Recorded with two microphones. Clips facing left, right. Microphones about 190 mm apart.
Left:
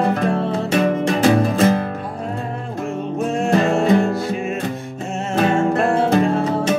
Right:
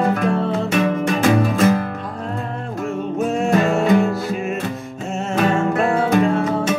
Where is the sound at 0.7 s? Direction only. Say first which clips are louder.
Left 3 dB; 35° left (ahead or behind).